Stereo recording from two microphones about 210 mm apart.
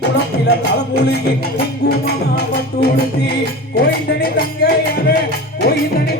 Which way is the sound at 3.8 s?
45° left (ahead or behind).